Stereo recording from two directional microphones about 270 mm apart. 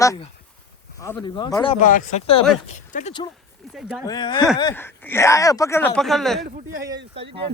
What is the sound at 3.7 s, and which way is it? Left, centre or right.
Speech, centre.